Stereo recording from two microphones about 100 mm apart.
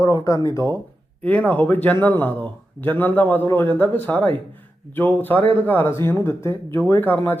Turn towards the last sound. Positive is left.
turn(degrees=20)  # may be behind; listen again after turning